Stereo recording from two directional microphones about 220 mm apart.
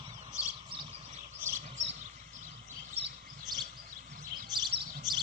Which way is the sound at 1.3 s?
10° right (ahead or behind).